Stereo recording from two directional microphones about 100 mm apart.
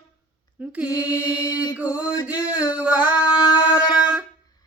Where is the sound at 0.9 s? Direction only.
35° left (ahead or behind).